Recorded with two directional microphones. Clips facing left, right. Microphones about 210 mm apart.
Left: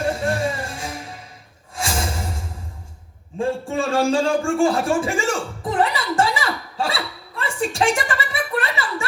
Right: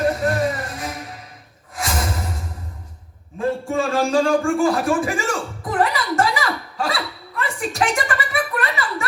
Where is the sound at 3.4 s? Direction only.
30° left (ahead or behind).